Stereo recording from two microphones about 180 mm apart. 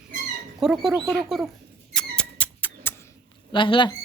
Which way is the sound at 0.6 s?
Centre (ahead or behind).